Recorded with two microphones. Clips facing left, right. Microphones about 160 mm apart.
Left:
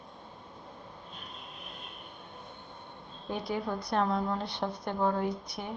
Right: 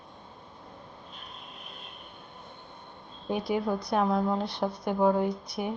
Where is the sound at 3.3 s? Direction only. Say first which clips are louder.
Right 5 dB; 20° right (ahead or behind).